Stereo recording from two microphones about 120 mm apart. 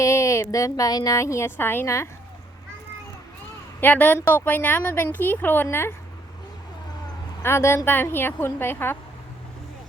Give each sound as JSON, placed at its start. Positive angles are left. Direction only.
{"t": 0.0, "sound": "speech", "side_deg": 25}
{"t": 3.8, "sound": "a woman's voice", "side_deg": 15}
{"t": 7.4, "sound": "speech", "side_deg": 20}